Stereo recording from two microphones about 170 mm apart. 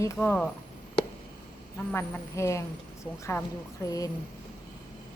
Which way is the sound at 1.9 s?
10° left (ahead or behind).